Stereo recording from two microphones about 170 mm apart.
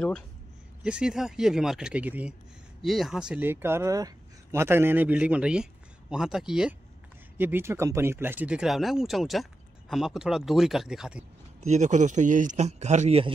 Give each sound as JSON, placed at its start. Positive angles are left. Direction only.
{"t": 0.8, "sound": "speech", "side_deg": -5}
{"t": 11.6, "sound": "a man's voice", "side_deg": -45}